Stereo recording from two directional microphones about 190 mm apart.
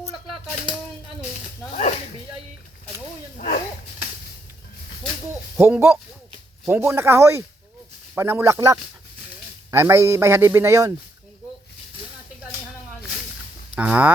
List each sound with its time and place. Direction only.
3.3 s a sound: 45° left (ahead or behind)
5.5 s a man's voice: 10° right (ahead or behind)
13.7 s a man's voice: 5° right (ahead or behind)